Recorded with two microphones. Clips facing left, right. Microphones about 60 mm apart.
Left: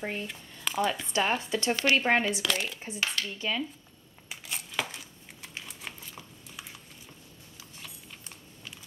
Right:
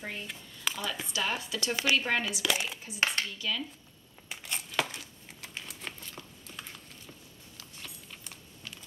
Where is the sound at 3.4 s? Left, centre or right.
Left.